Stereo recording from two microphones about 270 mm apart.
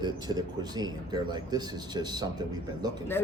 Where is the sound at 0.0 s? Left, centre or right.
Centre.